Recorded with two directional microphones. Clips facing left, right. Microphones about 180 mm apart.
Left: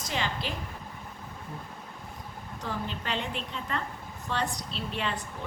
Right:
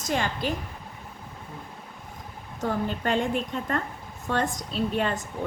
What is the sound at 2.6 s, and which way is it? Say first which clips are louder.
Speech: right 8 dB; 50° right (ahead or behind).